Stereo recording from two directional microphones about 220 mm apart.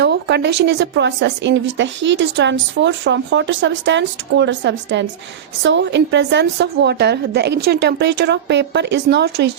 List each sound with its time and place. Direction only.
0.0 s speech: 50° right (ahead or behind)